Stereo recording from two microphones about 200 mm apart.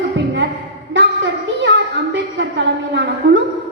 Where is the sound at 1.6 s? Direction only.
65° right (ahead or behind).